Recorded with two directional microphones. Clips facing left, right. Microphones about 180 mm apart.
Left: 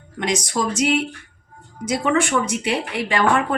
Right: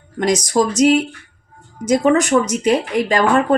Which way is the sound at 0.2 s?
40° right (ahead or behind).